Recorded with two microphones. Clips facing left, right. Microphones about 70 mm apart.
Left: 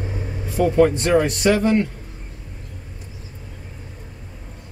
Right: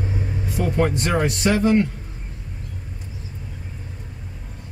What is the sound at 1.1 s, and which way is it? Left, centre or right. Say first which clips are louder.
Speech: left 4 dB; centre.